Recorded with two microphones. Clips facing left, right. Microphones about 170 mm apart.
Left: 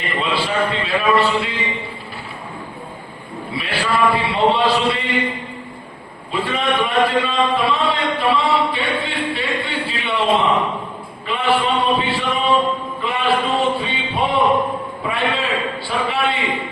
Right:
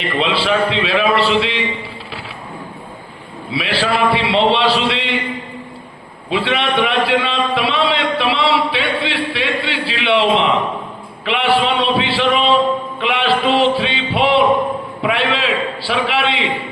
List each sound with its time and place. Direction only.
0.0 s a man's voice: 85° right
3.5 s speech: 85° right
6.3 s speech: 75° right (ahead or behind)
13.0 s music: 85° right
15.0 s a sound: 90° right